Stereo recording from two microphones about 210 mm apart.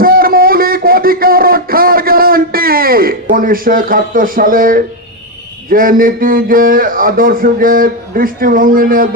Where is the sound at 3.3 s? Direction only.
40° right (ahead or behind).